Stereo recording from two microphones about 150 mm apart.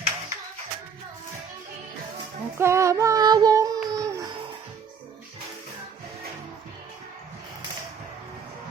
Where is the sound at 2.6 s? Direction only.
20° right (ahead or behind).